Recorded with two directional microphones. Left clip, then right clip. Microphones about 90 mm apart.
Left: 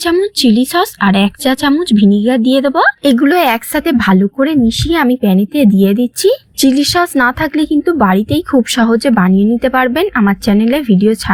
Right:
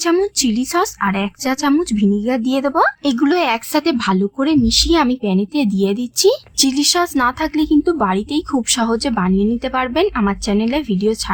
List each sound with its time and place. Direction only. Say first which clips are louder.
0.0 s a woman's voice: left 4 dB; 25° left (ahead or behind)
1.0 s speech: left 7 dB; 45° left (ahead or behind)
1.8 s a woman's voice: left 7 dB; 25° left (ahead or behind)
4.2 s a woman's voice: left 4 dB; 20° left (ahead or behind)